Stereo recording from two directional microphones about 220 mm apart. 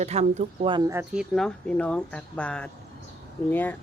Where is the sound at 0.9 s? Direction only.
10° right (ahead or behind).